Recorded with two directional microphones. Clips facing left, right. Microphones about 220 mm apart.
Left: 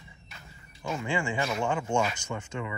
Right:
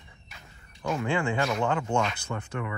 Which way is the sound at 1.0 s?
60° right (ahead or behind).